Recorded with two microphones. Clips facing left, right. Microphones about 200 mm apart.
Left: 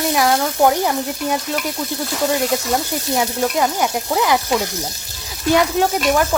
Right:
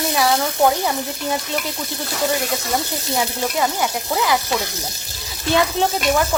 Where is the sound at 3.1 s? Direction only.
20° left (ahead or behind).